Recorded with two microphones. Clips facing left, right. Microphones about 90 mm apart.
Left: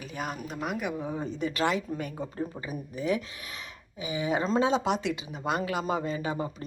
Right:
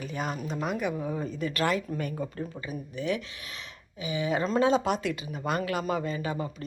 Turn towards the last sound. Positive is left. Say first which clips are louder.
# left 1 dB
turn(degrees=25)  # may be behind; listen again after turning